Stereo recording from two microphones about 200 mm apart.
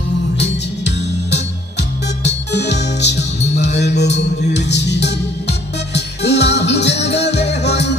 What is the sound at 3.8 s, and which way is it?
Music, 55° left (ahead or behind).